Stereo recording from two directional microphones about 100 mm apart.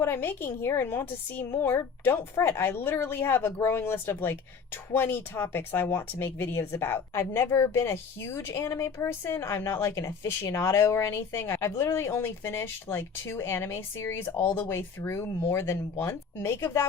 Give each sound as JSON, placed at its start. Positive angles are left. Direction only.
{"t": 0.0, "sound": "speech", "side_deg": 25}